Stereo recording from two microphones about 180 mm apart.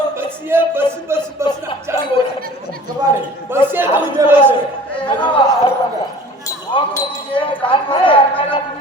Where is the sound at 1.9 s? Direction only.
15° right (ahead or behind).